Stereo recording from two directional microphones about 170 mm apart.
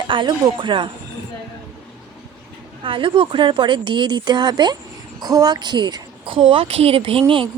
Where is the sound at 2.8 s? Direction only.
30° right (ahead or behind).